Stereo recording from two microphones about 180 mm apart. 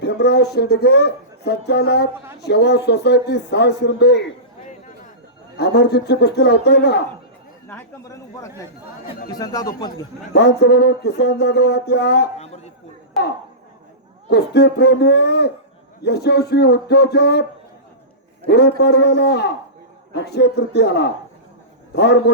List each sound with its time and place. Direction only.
0.0 s speech: 65° left (ahead or behind)
5.5 s speech: 65° left (ahead or behind)
7.7 s a man's voice: 15° left (ahead or behind)
10.3 s speech: 70° left (ahead or behind)
14.3 s speech: 65° left (ahead or behind)
18.4 s speech: 65° left (ahead or behind)